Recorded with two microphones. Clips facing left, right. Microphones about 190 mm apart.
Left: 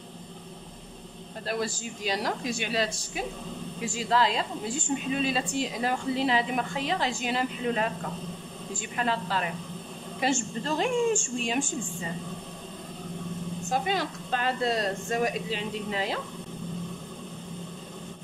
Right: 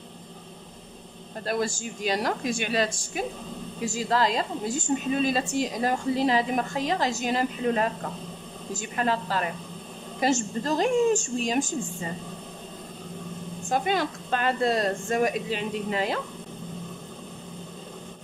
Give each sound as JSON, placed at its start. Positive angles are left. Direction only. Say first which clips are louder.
{"t": 1.4, "sound": "a woman's voice", "louder": "right 3 dB", "side_deg": -45}
{"t": 13.7, "sound": "a woman's voice", "louder": "right 3 dB", "side_deg": -55}